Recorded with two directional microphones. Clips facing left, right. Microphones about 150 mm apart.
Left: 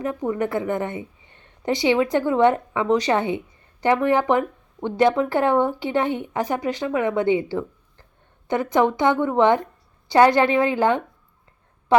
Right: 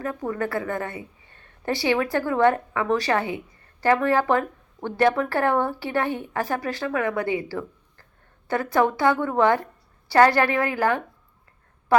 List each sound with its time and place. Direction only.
0.0 s a woman's voice: 20° left (ahead or behind)